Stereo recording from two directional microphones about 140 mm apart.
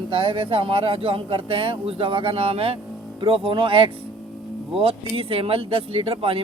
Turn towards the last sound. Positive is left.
turn(degrees=-40)  # may be behind; listen again after turning